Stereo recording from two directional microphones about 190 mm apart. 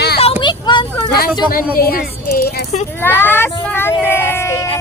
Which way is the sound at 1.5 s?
50° left (ahead or behind).